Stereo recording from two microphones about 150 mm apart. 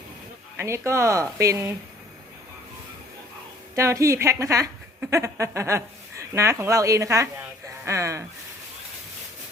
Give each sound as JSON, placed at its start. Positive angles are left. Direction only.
{"t": 0.5, "sound": "a woman's voice", "side_deg": -20}
{"t": 3.8, "sound": "a woman's voice", "side_deg": -20}